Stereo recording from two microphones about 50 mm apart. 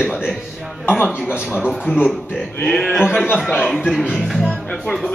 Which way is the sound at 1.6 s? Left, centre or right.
Centre.